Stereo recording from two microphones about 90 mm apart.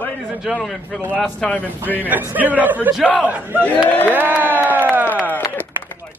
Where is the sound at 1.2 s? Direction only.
20° left (ahead or behind).